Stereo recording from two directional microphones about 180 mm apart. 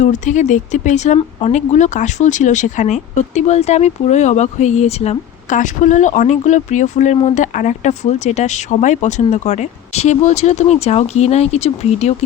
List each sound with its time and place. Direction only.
0.0 s speech: 40° left (ahead or behind)